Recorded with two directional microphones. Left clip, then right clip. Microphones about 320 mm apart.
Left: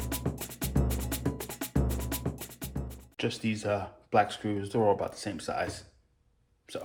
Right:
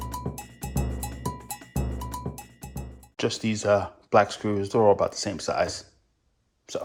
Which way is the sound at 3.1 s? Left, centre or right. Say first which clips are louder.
Right 5 dB; right.